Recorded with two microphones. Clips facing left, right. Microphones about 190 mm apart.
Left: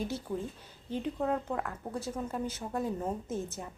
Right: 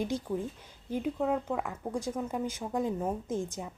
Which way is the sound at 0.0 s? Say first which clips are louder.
Right 3 dB; 15° right (ahead or behind).